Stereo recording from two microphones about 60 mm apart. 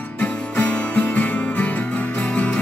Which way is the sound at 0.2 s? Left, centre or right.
Left.